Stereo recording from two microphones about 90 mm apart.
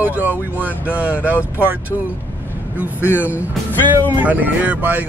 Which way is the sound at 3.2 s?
15° right (ahead or behind).